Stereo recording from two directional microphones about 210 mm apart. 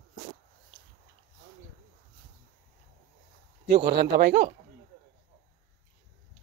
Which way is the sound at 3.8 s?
50° right (ahead or behind).